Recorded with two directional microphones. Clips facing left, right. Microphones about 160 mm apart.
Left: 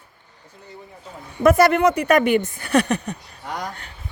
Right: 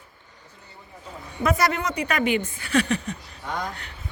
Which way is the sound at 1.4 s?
55° left (ahead or behind).